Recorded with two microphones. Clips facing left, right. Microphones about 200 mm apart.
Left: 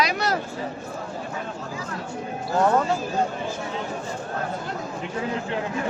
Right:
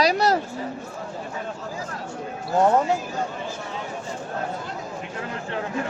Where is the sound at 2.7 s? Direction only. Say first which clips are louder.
Right 1 dB; 20° right (ahead or behind).